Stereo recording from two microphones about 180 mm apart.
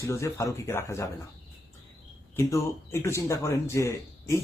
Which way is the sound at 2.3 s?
15° left (ahead or behind).